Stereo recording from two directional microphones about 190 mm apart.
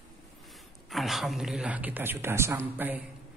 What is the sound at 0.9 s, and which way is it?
A woman's voice, centre (ahead or behind).